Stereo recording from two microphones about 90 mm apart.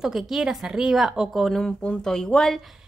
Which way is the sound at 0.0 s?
5° right (ahead or behind).